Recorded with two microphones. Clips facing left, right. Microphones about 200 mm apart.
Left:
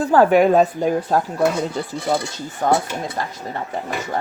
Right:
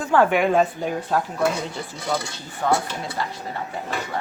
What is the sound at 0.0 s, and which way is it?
A woman's voice, 35° left (ahead or behind).